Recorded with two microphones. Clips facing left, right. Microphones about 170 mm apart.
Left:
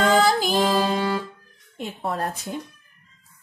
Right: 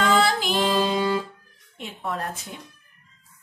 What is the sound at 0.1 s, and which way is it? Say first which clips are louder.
Music: left 2 dB; 40° left (ahead or behind).